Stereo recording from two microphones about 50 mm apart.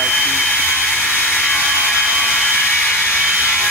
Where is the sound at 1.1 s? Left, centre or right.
Left.